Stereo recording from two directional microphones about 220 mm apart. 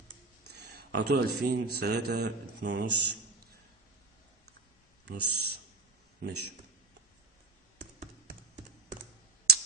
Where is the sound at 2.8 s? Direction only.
90° right.